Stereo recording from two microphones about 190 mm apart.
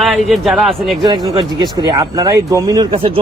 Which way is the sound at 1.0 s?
20° right (ahead or behind).